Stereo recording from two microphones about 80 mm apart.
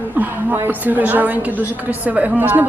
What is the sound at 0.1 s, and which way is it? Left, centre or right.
A woman's voice, right.